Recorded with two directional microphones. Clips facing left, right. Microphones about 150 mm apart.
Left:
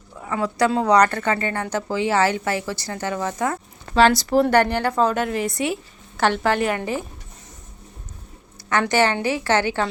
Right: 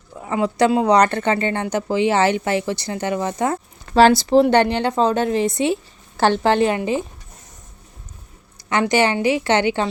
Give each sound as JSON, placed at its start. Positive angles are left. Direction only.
{"t": 0.3, "sound": "a woman's voice", "side_deg": -25}
{"t": 8.8, "sound": "a woman's voice", "side_deg": -15}